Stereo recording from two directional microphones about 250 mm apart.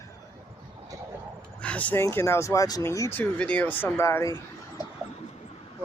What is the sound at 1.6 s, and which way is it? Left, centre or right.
Speech, centre.